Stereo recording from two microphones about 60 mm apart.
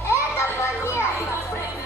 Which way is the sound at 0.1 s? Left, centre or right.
Left.